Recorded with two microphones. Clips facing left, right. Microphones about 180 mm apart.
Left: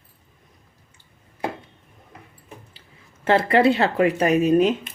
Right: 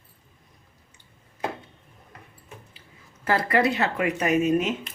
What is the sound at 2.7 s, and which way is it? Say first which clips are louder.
Speech: even; 30° left (ahead or behind).